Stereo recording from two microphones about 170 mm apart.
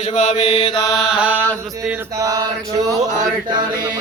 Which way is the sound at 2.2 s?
20° right (ahead or behind).